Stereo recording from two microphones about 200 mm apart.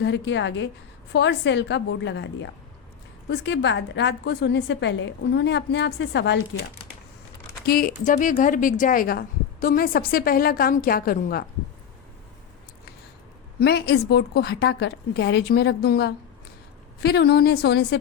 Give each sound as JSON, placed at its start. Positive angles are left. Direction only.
{"t": 0.0, "sound": "a woman's voice", "side_deg": 65}
{"t": 7.6, "sound": "speech", "side_deg": 50}
{"t": 13.6, "sound": "a woman's voice", "side_deg": 55}